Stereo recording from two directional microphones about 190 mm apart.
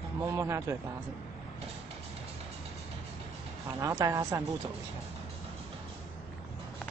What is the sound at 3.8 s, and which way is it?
Speech, 15° right (ahead or behind).